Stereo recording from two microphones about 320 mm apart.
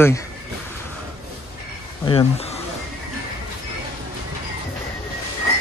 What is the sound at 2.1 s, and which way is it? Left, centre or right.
Speech, centre.